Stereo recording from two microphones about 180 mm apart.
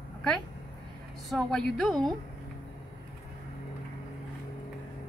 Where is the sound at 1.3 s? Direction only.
5° left (ahead or behind).